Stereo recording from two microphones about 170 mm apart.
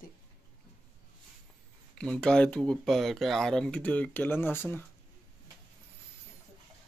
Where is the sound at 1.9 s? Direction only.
5° left (ahead or behind).